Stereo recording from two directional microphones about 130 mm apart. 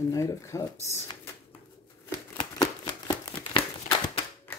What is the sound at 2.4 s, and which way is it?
Shuffling cards, 35° left (ahead or behind).